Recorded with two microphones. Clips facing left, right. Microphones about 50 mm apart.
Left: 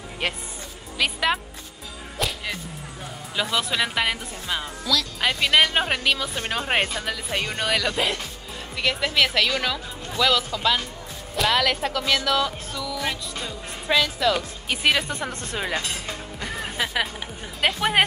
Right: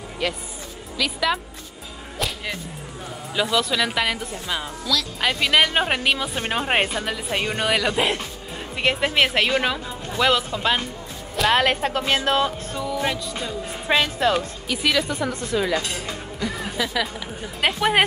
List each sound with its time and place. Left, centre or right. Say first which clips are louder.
0.2 s speech: right 2 dB; left
2.1 s music: even; centre
3.3 s speech: right 3 dB; centre
8.7 s a woman's voice: right 2 dB; right
11.5 s speech: right 4 dB; right
13.3 s speech: right 3 dB; centre
13.8 s speech: right 1 dB; right
14.7 s speech: even; left
17.7 s a woman's voice: right 2 dB; centre